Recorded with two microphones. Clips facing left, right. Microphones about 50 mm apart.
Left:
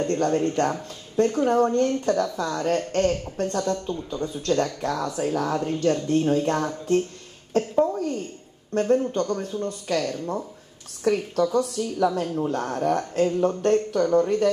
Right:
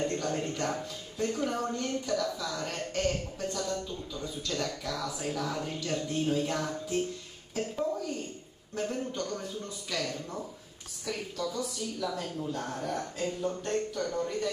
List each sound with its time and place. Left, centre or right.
0.0 s speech: left
1.3 s speech: left
1.6 s speech: left
8.7 s speech: left
11.5 s speech: left